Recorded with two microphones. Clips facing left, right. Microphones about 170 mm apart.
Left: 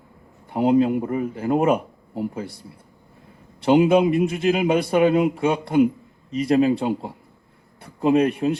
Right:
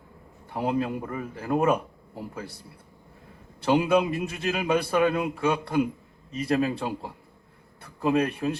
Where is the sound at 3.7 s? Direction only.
20° left (ahead or behind).